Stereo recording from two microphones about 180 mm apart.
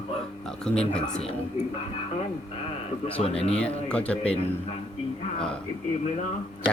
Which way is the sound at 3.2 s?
35° left (ahead or behind).